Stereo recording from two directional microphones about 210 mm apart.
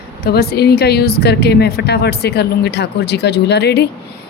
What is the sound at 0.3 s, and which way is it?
Speech, 50° left (ahead or behind).